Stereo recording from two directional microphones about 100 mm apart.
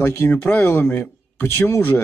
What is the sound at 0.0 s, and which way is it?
Speech, 20° left (ahead or behind).